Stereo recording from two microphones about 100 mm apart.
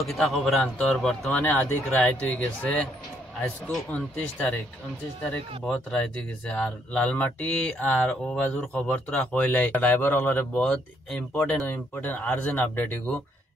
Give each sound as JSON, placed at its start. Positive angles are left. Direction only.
{"t": 0.0, "sound": "a man's voice", "side_deg": 0}
{"t": 1.4, "sound": "a man's voice", "side_deg": 15}